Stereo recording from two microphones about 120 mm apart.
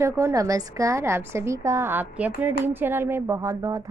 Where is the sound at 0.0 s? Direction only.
25° right (ahead or behind).